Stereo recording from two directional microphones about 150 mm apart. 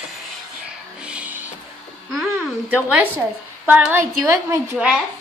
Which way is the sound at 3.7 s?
10° right (ahead or behind).